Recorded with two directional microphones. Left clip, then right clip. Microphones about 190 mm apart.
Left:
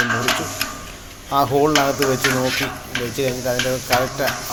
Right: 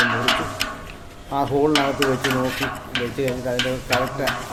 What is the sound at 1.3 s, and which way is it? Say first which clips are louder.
A man's voice: left 3 dB; centre (ahead or behind).